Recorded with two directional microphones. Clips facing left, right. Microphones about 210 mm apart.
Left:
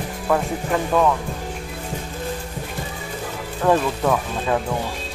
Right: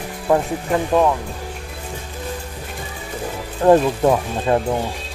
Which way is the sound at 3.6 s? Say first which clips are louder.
Right 5 dB; 30° right (ahead or behind).